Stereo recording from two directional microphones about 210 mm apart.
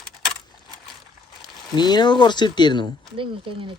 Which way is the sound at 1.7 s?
20° left (ahead or behind).